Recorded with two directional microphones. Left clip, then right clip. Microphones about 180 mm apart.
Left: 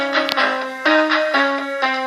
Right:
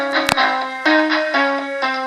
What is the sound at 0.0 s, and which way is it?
Music, 30° left (ahead or behind).